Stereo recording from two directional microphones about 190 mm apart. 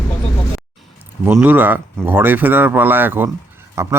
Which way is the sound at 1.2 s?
10° right (ahead or behind).